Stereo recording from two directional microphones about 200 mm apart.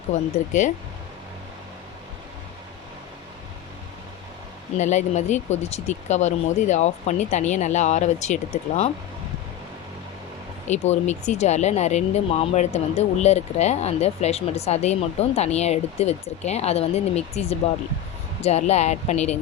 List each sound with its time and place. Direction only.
0.1 s speech: 40° left (ahead or behind)
4.8 s speech: 35° left (ahead or behind)
10.7 s speech: 35° left (ahead or behind)